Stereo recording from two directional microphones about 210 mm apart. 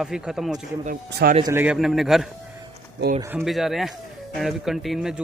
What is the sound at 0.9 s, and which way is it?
Speech, 45° right (ahead or behind).